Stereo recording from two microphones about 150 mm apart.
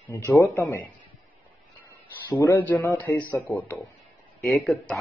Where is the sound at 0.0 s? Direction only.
15° left (ahead or behind).